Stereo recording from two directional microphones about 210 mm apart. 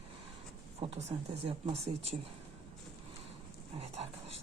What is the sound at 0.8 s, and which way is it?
Speech, 30° right (ahead or behind).